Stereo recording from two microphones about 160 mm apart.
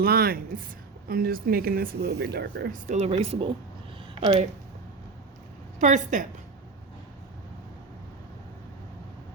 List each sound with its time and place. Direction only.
0.0 s speech: 70° right (ahead or behind)
2.9 s speech: 40° right (ahead or behind)
5.8 s a woman's voice: 50° right (ahead or behind)